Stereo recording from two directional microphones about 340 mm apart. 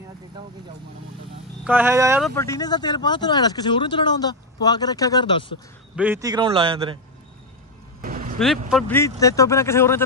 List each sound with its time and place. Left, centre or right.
1.6 s speech: centre
2.3 s speech: centre
5.9 s a man's voice: centre
8.0 s a sound: right
8.4 s speech: centre